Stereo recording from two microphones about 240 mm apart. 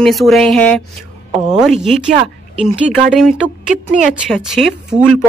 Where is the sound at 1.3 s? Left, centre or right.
Centre.